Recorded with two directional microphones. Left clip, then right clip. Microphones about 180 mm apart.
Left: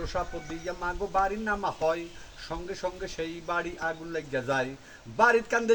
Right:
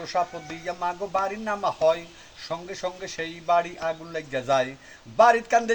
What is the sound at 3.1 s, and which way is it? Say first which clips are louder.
Speech: right 13 dB; 20° left (ahead or behind).